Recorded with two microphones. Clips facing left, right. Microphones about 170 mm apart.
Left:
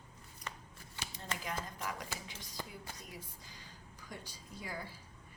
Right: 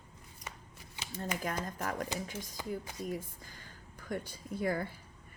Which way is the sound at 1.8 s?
50° right (ahead or behind).